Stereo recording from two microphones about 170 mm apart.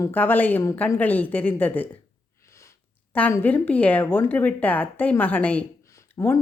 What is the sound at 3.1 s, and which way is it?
A woman's voice, 10° left (ahead or behind).